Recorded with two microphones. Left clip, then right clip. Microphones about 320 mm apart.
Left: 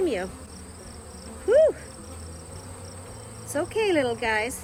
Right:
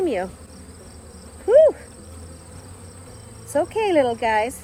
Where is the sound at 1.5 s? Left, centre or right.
Centre.